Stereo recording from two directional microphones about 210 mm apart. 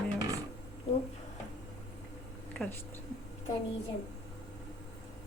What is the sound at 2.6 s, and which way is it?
Speech, 5° left (ahead or behind).